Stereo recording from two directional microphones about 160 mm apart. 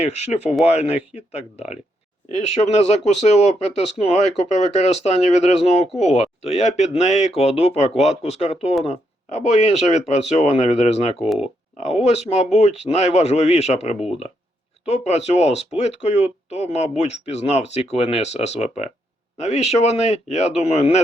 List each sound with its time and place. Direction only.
0.0 s speech: 40° left (ahead or behind)
11.2 s speech: 5° right (ahead or behind)
11.8 s speech: 45° left (ahead or behind)